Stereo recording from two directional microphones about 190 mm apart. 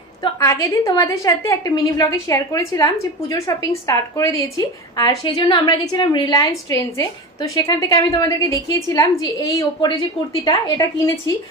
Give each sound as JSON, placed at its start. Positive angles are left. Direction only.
{"t": 0.2, "sound": "a woman's voice", "side_deg": 20}